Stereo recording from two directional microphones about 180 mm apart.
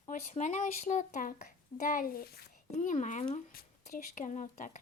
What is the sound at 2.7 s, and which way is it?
Speech, 45° left (ahead or behind).